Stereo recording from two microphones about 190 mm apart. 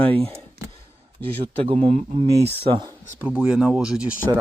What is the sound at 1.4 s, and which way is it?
Speech, 30° right (ahead or behind).